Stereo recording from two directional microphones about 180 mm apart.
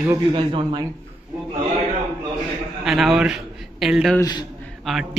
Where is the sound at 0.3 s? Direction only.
25° right (ahead or behind).